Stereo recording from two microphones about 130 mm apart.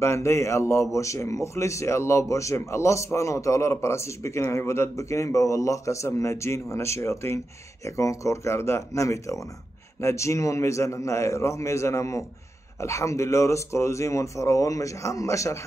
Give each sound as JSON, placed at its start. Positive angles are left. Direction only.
{"t": 0.0, "sound": "a man's voice", "side_deg": 20}